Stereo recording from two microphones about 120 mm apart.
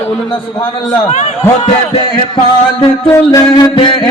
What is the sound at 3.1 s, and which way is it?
Music, 25° left (ahead or behind).